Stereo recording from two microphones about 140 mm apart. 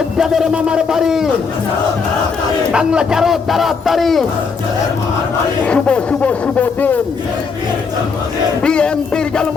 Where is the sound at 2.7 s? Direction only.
5° right (ahead or behind).